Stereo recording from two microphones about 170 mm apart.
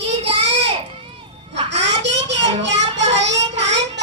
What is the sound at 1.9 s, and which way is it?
Child singing, 90° right.